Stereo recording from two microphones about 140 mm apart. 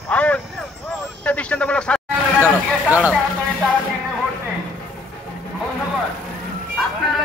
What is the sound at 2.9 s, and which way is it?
Speech, 10° right (ahead or behind).